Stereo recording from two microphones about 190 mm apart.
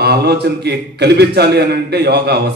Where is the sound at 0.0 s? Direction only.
55° right (ahead or behind).